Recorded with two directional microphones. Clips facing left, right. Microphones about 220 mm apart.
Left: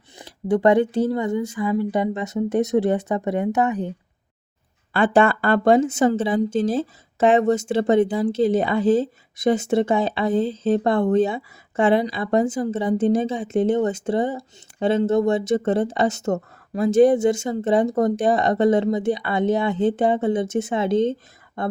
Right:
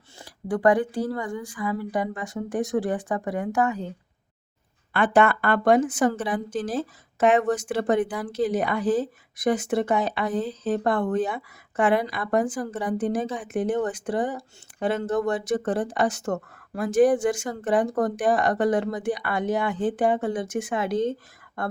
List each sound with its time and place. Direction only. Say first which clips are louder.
0.2 s a woman's voice: left 5 dB; 25° left (ahead or behind)
4.9 s a woman's voice: left 3 dB; 30° left (ahead or behind)